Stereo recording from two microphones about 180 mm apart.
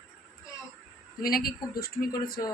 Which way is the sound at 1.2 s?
55° left (ahead or behind).